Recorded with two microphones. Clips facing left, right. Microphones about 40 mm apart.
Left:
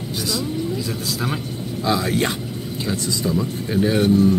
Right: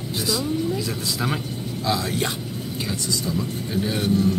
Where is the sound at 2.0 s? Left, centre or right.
Centre.